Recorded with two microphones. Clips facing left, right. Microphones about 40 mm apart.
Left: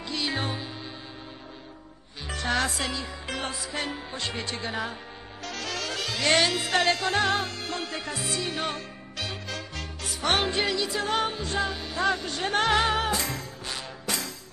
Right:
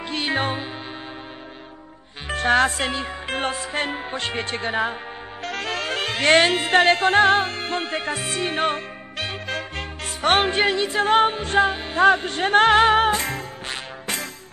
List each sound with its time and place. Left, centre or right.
0.1 s music: right
2.2 s music: right